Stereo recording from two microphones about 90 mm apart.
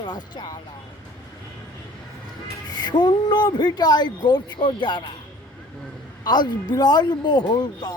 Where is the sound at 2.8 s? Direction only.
55° left (ahead or behind).